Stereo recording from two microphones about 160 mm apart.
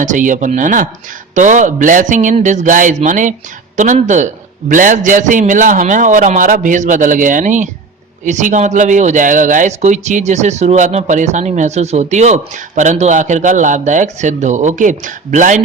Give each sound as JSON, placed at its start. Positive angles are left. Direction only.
{"t": 0.0, "sound": "speech", "side_deg": -50}